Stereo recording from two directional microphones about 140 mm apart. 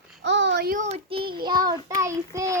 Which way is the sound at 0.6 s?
90° right.